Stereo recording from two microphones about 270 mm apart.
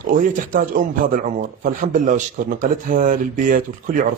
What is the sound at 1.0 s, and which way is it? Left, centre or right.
Speech, right.